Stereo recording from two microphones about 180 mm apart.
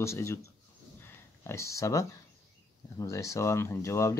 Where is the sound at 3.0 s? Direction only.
15° left (ahead or behind).